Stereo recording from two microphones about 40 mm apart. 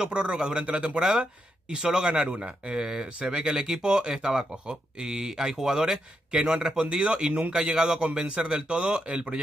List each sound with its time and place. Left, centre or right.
0.0 s speech: centre
2.1 s speech: right